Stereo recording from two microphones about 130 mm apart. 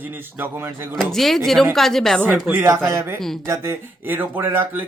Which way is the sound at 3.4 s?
20° right (ahead or behind).